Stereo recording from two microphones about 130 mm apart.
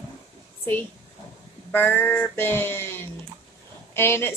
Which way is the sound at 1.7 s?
15° left (ahead or behind).